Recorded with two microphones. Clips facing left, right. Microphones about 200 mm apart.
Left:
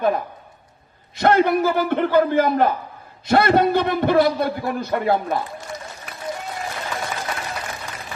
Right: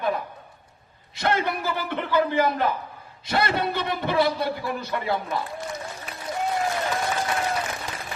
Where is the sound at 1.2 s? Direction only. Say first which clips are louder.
Left 9 dB; 50° left (ahead or behind).